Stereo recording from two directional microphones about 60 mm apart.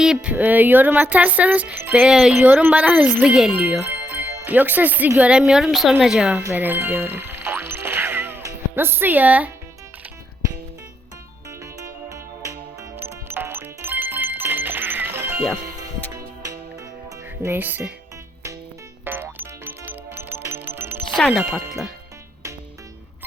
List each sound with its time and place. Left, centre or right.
0.0 s speech: centre
2.1 s a woman's voice: centre
2.4 s speech: right
3.2 s a woman's voice: centre
3.5 s speech: right
5.4 s a woman's voice: centre
6.5 s music: right
8.7 s speech: right
11.6 s music: right
13.0 s music: right
16.4 s music: right
17.5 s speech: right
19.0 s music: right
21.2 s speech: centre